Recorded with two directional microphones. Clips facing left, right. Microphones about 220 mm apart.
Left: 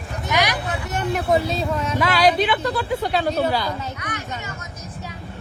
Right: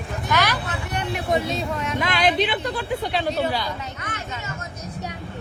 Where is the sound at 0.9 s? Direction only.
45° left (ahead or behind).